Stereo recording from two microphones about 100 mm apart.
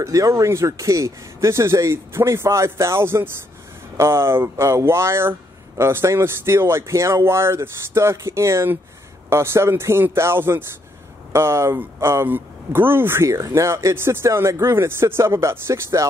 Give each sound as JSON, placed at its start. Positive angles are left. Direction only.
{"t": 0.0, "sound": "speech", "side_deg": -35}